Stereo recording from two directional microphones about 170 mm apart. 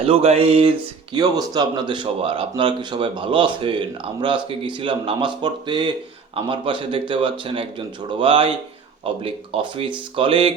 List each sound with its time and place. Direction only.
0.0 s speech: 35° right (ahead or behind)
1.1 s speech: 25° right (ahead or behind)